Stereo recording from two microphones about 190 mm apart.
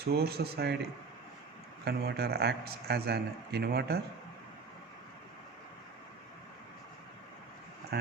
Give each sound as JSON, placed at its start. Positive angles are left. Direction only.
{"t": 0.1, "sound": "a man's voice", "side_deg": -55}
{"t": 1.8, "sound": "a man's voice", "side_deg": -60}